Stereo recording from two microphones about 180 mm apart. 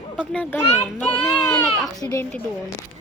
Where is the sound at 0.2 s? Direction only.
10° left (ahead or behind).